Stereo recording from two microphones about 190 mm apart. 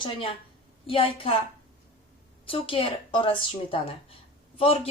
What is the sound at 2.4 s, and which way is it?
A woman's voice, 30° left (ahead or behind).